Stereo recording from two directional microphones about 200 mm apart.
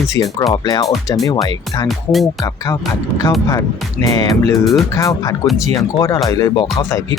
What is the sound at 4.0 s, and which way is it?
Music, 20° left (ahead or behind).